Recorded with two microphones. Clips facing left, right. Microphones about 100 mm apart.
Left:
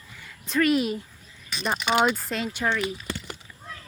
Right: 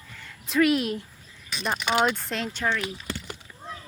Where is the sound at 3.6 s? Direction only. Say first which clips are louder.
Right 3 dB; 25° right (ahead or behind).